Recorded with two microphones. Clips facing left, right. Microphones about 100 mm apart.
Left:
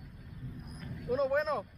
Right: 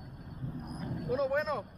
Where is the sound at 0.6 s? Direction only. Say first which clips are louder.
Right 8 dB; 40° right (ahead or behind).